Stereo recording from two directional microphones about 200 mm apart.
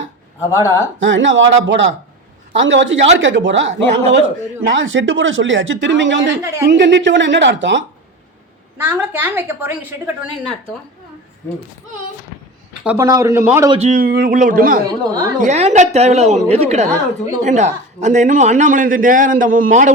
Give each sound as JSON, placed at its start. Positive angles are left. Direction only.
{"t": 0.5, "sound": "speech", "side_deg": 15}
{"t": 1.0, "sound": "speech", "side_deg": -65}
{"t": 8.8, "sound": "speech", "side_deg": -10}
{"t": 12.8, "sound": "speech", "side_deg": -10}
{"t": 13.7, "sound": "a man's voice", "side_deg": -35}
{"t": 15.0, "sound": "a woman's voice", "side_deg": -20}
{"t": 15.4, "sound": "a man's voice", "side_deg": -35}